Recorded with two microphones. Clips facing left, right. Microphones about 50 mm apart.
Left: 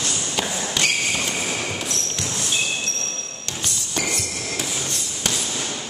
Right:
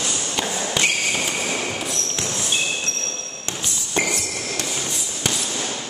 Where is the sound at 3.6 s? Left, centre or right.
Centre.